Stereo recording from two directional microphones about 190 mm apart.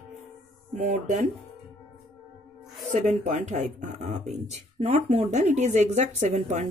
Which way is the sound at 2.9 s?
40° right (ahead or behind).